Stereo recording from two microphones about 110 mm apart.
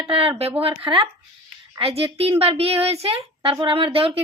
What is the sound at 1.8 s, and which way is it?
A woman's voice, 60° right (ahead or behind).